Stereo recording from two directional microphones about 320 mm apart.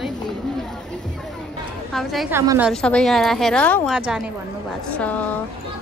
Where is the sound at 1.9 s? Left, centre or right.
Centre.